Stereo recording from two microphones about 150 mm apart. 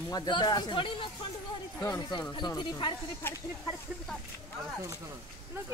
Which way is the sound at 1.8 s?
25° left (ahead or behind).